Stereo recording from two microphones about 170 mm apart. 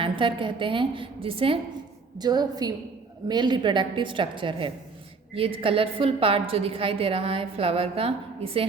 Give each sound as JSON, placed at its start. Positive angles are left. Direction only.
{"t": 0.0, "sound": "a woman's voice", "side_deg": -30}